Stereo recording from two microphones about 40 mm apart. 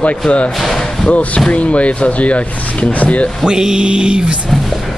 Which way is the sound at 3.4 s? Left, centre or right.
Centre.